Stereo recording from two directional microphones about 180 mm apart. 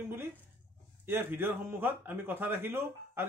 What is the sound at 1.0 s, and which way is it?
Speech, 10° right (ahead or behind).